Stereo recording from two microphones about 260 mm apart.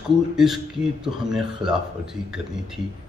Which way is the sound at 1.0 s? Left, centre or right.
Centre.